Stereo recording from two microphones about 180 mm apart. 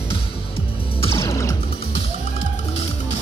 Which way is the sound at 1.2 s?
15° left (ahead or behind).